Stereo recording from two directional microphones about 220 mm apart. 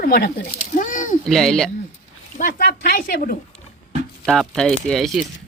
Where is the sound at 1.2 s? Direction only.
Centre (ahead or behind).